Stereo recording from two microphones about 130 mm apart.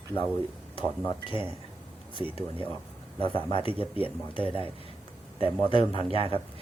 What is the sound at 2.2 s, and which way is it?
A man's voice, 40° left (ahead or behind).